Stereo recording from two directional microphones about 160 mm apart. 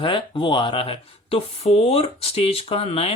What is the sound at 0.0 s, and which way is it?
Speech, 30° left (ahead or behind).